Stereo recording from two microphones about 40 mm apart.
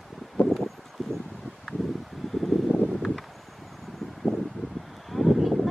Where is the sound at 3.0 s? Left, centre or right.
Centre.